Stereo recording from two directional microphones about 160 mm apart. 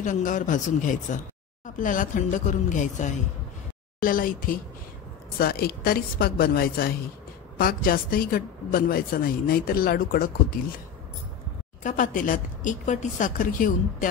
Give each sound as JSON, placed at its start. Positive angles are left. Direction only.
{"t": 0.0, "sound": "a man's voice", "side_deg": 55}
{"t": 4.0, "sound": "speech", "side_deg": 60}
{"t": 5.4, "sound": "a woman's voice", "side_deg": 70}
{"t": 11.8, "sound": "a woman's voice", "side_deg": 55}